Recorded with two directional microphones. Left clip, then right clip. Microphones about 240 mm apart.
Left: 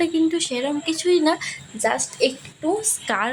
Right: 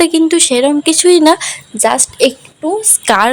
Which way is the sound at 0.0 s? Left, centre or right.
Right.